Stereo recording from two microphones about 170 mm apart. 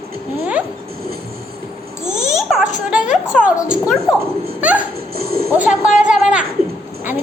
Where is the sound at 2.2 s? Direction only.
Centre (ahead or behind).